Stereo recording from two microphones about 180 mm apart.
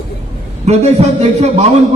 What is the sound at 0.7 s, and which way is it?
A man's voice, 40° right (ahead or behind).